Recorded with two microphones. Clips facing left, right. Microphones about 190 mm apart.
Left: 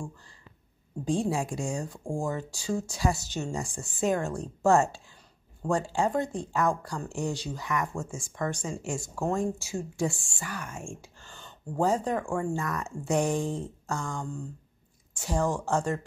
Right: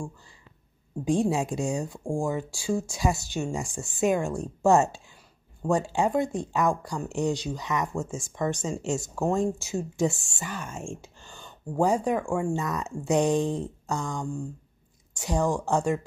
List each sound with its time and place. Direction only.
1.0 s speech: 15° right (ahead or behind)